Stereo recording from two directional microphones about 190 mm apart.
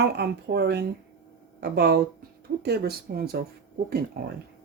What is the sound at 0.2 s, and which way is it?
Speech, 60° right (ahead or behind).